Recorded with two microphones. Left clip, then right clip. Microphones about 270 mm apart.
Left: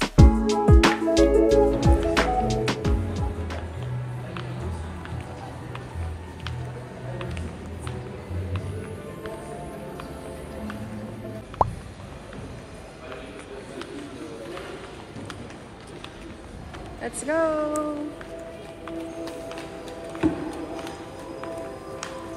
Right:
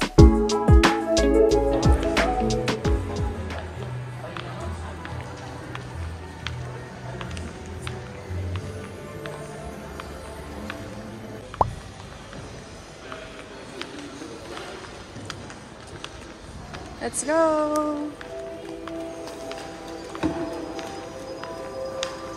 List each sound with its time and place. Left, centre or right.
0.0 s music: centre
11.6 s plop: centre
17.0 s speech: centre